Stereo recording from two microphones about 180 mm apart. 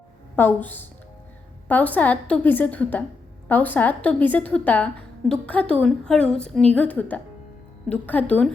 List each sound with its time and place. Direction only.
0.3 s a woman's voice: 10° left (ahead or behind)